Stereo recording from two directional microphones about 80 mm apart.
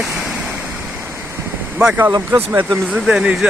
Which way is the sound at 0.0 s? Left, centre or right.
Centre.